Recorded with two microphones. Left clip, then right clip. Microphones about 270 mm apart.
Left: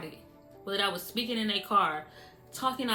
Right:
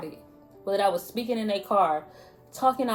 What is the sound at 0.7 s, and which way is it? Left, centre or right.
Speech, left.